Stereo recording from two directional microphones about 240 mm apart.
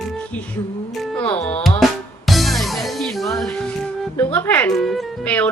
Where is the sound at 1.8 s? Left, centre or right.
Centre.